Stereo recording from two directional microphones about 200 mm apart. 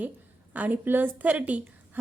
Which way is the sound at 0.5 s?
10° right (ahead or behind).